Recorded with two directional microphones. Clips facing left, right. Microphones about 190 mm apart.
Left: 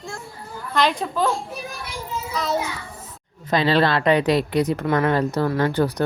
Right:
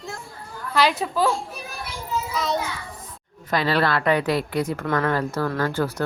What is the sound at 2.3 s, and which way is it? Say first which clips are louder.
Speech: left 2 dB; centre (ahead or behind).